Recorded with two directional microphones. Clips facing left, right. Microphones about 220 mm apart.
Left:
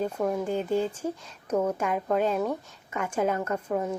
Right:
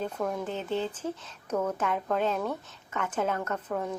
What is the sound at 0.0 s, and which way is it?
Speech, 10° left (ahead or behind).